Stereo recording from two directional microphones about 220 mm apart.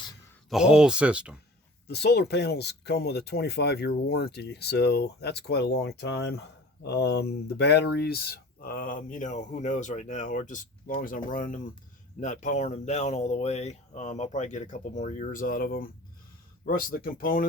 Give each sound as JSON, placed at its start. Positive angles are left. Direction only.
{"t": 0.5, "sound": "speech", "side_deg": -5}
{"t": 1.9, "sound": "speech", "side_deg": 50}